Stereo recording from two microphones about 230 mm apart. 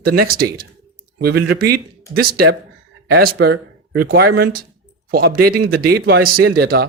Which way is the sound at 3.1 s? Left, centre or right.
Right.